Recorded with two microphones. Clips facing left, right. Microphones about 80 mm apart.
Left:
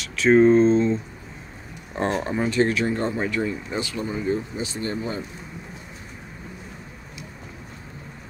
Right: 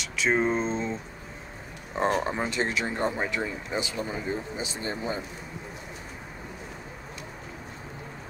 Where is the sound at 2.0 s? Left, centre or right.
Centre.